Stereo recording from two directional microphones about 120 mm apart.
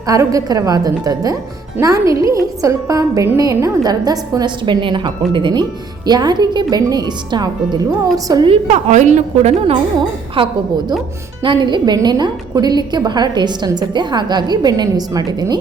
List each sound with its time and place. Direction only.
0.1 s a woman's voice: 30° right (ahead or behind)
8.4 s a woman's voice: 70° right (ahead or behind)
10.3 s a woman's voice: 45° right (ahead or behind)